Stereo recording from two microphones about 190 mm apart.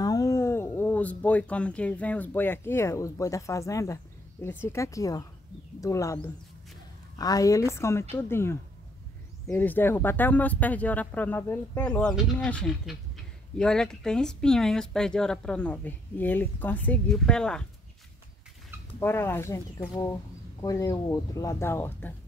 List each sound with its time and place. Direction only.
0.0 s speech: 15° left (ahead or behind)
7.2 s speech: 20° left (ahead or behind)
18.9 s speech: 10° left (ahead or behind)